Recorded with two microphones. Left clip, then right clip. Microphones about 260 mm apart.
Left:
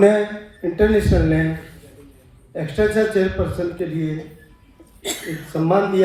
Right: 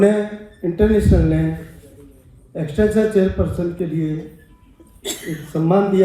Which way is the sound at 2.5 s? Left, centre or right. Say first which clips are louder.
Right 1 dB; left.